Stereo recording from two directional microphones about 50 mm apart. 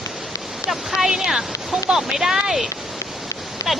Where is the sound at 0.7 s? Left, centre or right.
Centre.